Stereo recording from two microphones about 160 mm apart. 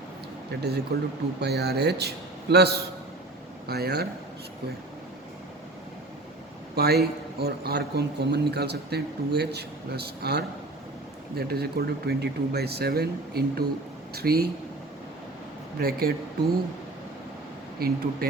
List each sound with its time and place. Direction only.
0.5 s speech: 90° right
6.7 s speech: 80° right
15.8 s speech: 70° right (ahead or behind)
17.7 s speech: 70° right (ahead or behind)